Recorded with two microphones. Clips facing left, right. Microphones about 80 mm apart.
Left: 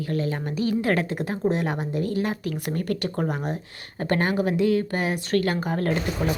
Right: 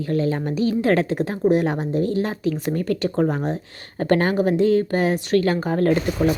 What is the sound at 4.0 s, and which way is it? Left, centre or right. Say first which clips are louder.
Speech: right 5 dB; right.